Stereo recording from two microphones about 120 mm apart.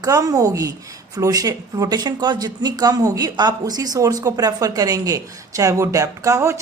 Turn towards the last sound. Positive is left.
turn(degrees=-25)  # may be behind; listen again after turning